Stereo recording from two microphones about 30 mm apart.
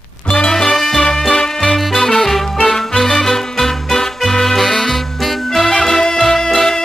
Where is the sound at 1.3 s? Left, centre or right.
Left.